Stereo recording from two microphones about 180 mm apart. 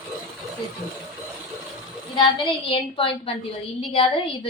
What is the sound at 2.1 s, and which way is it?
A woman's voice, 25° left (ahead or behind).